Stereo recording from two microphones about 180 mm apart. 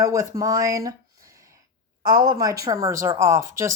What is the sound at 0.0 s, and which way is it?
Speech, 15° right (ahead or behind).